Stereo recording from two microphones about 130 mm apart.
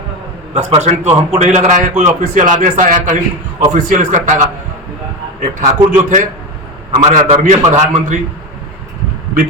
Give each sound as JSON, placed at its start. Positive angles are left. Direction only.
{"t": 0.5, "sound": "a man's voice", "side_deg": -55}
{"t": 5.4, "sound": "a man's voice", "side_deg": -75}